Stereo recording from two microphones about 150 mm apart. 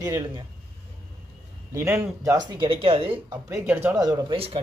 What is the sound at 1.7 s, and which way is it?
Speech, 20° right (ahead or behind).